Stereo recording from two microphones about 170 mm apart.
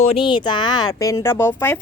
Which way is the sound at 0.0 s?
30° left (ahead or behind).